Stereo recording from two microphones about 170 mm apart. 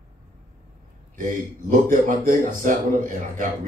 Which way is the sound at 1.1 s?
50° right (ahead or behind).